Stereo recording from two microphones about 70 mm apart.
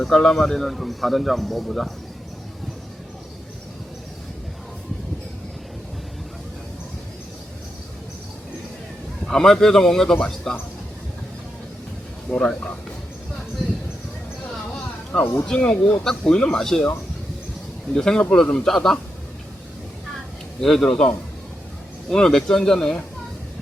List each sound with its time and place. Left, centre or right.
0.0 s a man's voice: centre
9.2 s a man's voice: centre
12.3 s a man's voice: centre
15.1 s a man's voice: centre
15.6 s a man's voice: left
16.0 s a man's voice: centre
17.9 s a man's voice: centre
20.6 s a man's voice: centre
22.1 s a man's voice: centre